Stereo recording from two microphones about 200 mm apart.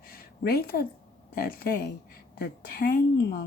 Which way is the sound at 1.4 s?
45° left (ahead or behind).